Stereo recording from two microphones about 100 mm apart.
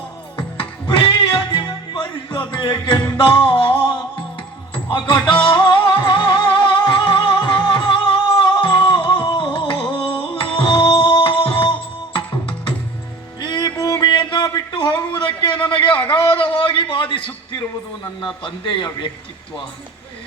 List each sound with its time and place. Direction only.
0.5 s music: 55° left (ahead or behind)
14.0 s a sound: 50° left (ahead or behind)
18.0 s a man's voice: 50° left (ahead or behind)